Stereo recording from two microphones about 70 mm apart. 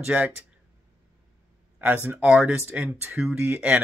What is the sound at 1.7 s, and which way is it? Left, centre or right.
Speech, right.